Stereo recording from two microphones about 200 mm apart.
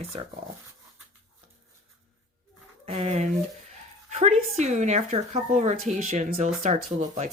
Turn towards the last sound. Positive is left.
turn(degrees=-40)  # may be behind; listen again after turning